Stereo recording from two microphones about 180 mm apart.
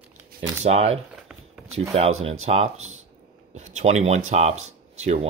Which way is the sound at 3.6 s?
40° right (ahead or behind).